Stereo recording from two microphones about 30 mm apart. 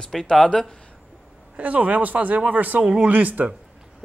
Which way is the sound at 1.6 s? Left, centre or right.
Right.